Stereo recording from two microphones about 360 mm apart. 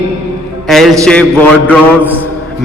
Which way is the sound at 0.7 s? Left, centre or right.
Centre.